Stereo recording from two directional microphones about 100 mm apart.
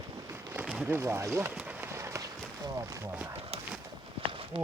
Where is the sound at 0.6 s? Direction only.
15° right (ahead or behind).